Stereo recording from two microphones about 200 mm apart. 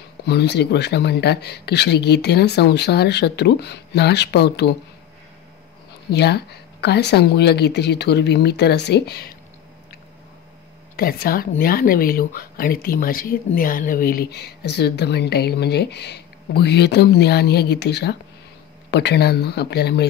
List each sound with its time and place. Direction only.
0.2 s speech: 55° left (ahead or behind)
6.0 s speech: 55° left (ahead or behind)
11.0 s speech: 50° left (ahead or behind)